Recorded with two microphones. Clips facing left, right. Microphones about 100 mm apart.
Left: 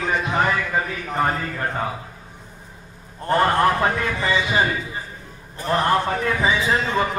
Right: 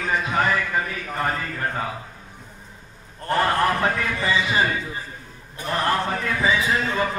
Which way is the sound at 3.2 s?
25° left (ahead or behind).